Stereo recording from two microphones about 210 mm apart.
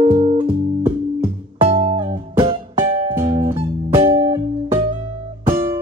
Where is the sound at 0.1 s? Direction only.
25° right (ahead or behind).